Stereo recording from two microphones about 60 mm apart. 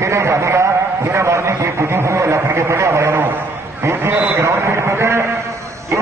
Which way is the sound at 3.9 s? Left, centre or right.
Right.